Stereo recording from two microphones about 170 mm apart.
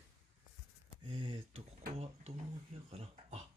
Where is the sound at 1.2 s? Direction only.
30° right (ahead or behind).